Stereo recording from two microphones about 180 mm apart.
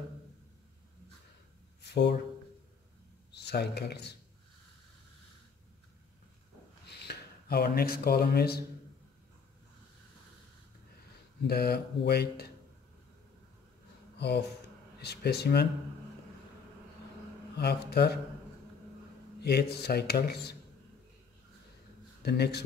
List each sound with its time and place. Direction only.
1.8 s a sound: 65° left (ahead or behind)
3.3 s speech: 65° left (ahead or behind)
6.9 s speech: 65° left (ahead or behind)
11.4 s speech: 60° left (ahead or behind)
14.1 s speech: 70° left (ahead or behind)
17.6 s speech: 65° left (ahead or behind)
19.4 s speech: 65° left (ahead or behind)
22.2 s speech: 65° left (ahead or behind)